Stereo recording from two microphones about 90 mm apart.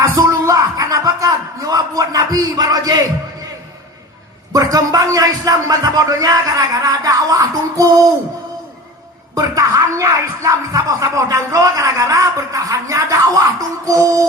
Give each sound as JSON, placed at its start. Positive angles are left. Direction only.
{"t": 0.2, "sound": "a sound", "side_deg": -40}
{"t": 4.5, "sound": "speech", "side_deg": -45}
{"t": 9.3, "sound": "speech", "side_deg": -40}